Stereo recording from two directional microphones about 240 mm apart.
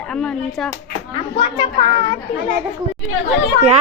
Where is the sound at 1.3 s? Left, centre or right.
Centre.